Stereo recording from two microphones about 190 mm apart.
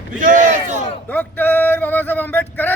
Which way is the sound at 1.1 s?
10° left (ahead or behind).